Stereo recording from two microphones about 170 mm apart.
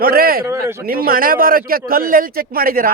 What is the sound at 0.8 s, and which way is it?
Speech, 60° right (ahead or behind).